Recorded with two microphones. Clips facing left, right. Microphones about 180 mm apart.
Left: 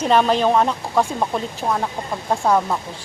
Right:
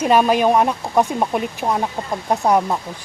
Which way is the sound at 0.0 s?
10° right (ahead or behind).